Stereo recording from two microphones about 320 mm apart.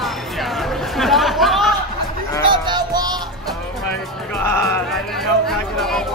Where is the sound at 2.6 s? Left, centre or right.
Centre.